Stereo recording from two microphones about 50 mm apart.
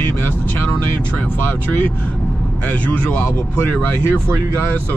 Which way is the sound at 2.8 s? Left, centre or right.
Left.